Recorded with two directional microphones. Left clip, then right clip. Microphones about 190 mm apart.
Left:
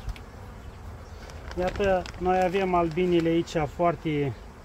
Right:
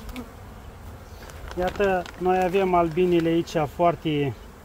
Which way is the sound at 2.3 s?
40° right (ahead or behind).